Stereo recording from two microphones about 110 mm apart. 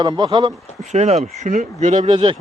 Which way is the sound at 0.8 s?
90° right.